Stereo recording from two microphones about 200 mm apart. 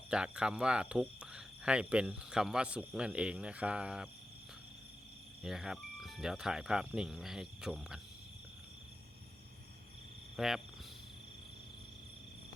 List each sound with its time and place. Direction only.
0.1 s speech: 5° right (ahead or behind)
5.4 s speech: centre (ahead or behind)
10.3 s cricket: centre (ahead or behind)